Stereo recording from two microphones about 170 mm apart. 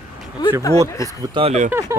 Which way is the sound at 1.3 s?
35° right (ahead or behind).